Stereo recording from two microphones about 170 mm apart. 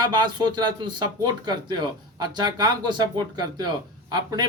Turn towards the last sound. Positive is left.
turn(degrees=-25)  # may be behind; listen again after turning